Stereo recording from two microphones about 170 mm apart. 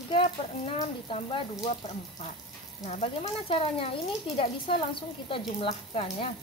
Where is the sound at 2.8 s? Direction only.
40° left (ahead or behind).